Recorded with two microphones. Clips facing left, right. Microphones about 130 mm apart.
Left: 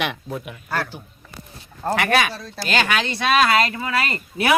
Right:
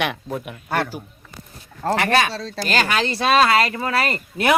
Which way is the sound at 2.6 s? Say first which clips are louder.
Right 1 dB; 40° right (ahead or behind).